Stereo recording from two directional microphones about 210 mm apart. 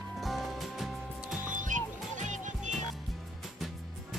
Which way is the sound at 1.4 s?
40° right (ahead or behind).